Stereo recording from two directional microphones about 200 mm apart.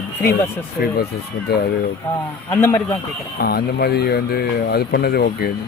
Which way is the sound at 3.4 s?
50° left (ahead or behind).